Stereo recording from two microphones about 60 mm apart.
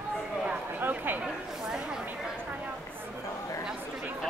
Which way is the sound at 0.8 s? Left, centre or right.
Right.